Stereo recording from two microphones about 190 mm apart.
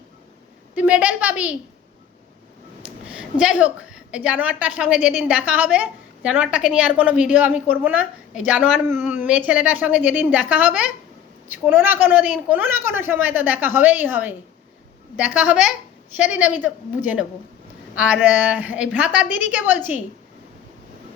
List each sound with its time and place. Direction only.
0.8 s a woman's voice: 5° right (ahead or behind)
2.8 s a woman's voice: 5° right (ahead or behind)
17.9 s a woman's voice: 5° right (ahead or behind)
19.8 s a woman's voice: 40° left (ahead or behind)